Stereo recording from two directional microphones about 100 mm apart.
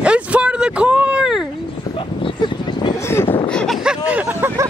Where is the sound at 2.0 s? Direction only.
55° left (ahead or behind).